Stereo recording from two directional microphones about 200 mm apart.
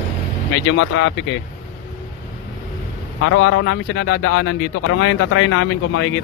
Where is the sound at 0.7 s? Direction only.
70° left (ahead or behind).